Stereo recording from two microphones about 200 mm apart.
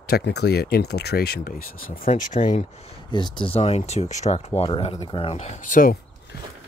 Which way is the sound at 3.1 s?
25° left (ahead or behind).